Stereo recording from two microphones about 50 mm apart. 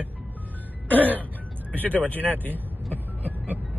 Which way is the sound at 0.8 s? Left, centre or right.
Left.